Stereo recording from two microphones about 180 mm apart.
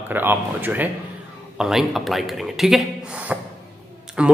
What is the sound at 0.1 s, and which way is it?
A man's voice, 10° right (ahead or behind).